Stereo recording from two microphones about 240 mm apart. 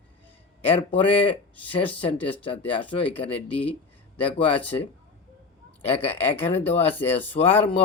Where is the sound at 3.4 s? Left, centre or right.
Centre.